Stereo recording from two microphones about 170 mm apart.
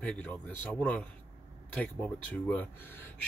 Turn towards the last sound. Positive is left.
turn(degrees=10)  # may be behind; listen again after turning